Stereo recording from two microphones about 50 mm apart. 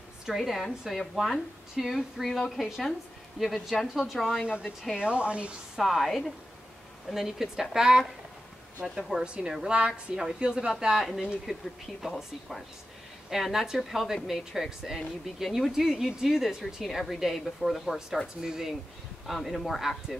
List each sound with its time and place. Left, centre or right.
0.3 s speech: centre
4.4 s speech: centre
5.8 s speech: centre
9.2 s speech: right
12.2 s speech: centre